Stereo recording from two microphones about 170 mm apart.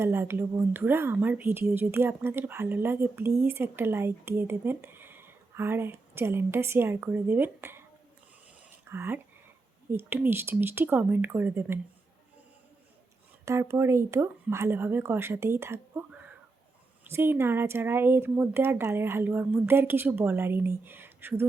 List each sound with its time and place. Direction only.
0.0 s a woman's voice: 15° right (ahead or behind)
8.9 s a woman's voice: 15° right (ahead or behind)
13.4 s a woman's voice: 15° right (ahead or behind)